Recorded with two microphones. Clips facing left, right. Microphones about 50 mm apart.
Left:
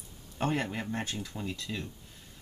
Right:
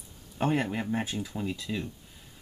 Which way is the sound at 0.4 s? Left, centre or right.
Centre.